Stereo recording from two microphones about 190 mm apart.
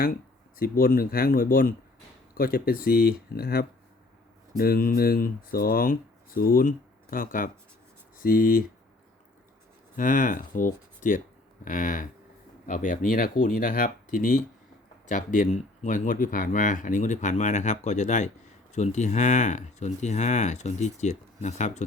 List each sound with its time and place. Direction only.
0.0 s speech: 50° left (ahead or behind)
9.9 s speech: 45° left (ahead or behind)